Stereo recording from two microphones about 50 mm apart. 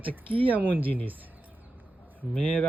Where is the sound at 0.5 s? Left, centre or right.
Right.